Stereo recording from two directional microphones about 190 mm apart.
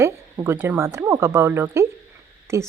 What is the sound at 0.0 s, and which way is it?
Speech, 15° right (ahead or behind).